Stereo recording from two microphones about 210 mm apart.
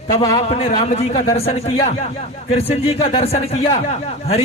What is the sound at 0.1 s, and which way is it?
A man's voice, 15° left (ahead or behind).